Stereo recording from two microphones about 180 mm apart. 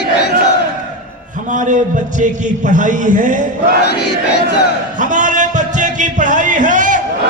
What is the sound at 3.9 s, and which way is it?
Battle cry, 70° left (ahead or behind).